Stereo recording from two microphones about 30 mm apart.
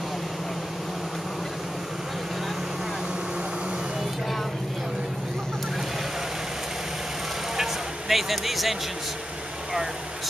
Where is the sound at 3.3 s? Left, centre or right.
Right.